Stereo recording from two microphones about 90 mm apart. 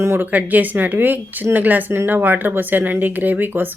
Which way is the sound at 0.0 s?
30° right (ahead or behind).